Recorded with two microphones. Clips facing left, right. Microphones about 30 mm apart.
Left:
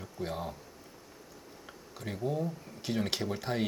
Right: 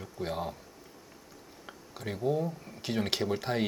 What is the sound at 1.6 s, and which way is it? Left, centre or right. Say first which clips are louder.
Speech: right 3 dB; centre.